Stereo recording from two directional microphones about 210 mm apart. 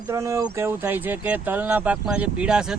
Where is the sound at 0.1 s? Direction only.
15° right (ahead or behind).